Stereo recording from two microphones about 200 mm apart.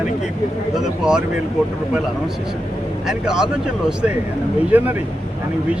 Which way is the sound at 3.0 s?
5° right (ahead or behind).